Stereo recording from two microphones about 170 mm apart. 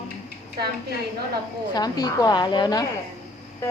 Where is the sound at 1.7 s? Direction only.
25° left (ahead or behind).